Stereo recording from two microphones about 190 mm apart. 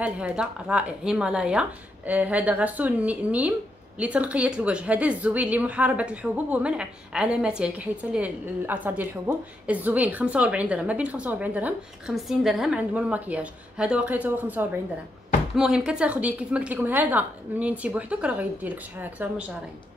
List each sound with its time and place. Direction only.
0.0 s a woman's voice: 5° right (ahead or behind)